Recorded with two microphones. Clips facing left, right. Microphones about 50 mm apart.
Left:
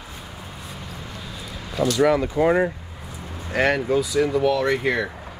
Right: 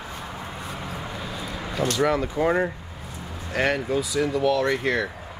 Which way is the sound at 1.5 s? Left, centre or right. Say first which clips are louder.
Right 3 dB; right.